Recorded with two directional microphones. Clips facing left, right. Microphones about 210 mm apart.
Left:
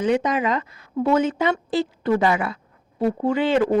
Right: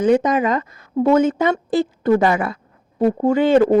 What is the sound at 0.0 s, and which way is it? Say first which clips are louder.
Speech: right 5 dB; 45° right (ahead or behind).